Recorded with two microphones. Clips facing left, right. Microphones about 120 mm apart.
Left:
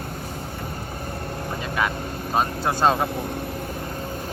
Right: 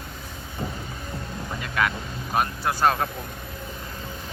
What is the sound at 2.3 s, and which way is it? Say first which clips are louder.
Speech: left 2 dB; 25° left (ahead or behind).